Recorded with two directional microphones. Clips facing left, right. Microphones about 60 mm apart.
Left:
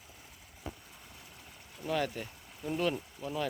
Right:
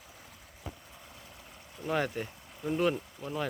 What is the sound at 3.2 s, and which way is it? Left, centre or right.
Speech, centre.